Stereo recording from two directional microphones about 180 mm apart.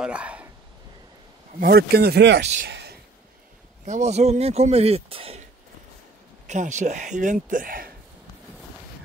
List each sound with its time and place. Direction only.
0.0 s a sound: 5° right (ahead or behind)
1.6 s speech: 60° right (ahead or behind)
2.4 s speech: 40° right (ahead or behind)
2.7 s a sound: 65° right (ahead or behind)
3.8 s speech: 40° right (ahead or behind)
6.4 s speech: 40° right (ahead or behind)